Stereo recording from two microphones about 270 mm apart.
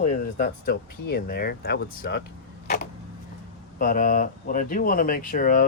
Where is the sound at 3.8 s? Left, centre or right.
Left.